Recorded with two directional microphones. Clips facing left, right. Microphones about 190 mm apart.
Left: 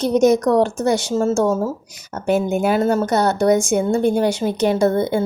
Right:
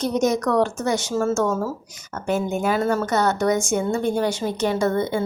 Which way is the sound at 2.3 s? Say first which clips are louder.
Left 5 dB; 70° left (ahead or behind).